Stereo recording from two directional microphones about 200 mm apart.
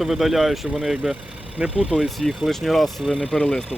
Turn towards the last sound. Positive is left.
turn(degrees=5)  # may be behind; listen again after turning